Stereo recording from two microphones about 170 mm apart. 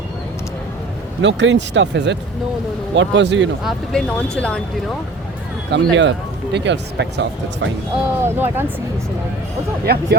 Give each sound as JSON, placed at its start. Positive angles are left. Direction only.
{"t": 1.2, "sound": "speech", "side_deg": -90}
{"t": 3.6, "sound": "speech", "side_deg": 0}
{"t": 5.7, "sound": "speech", "side_deg": -90}
{"t": 8.2, "sound": "speech", "side_deg": -10}
{"t": 9.8, "sound": "speech", "side_deg": -70}